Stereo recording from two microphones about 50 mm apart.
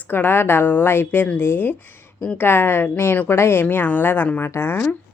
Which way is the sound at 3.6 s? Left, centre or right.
Left.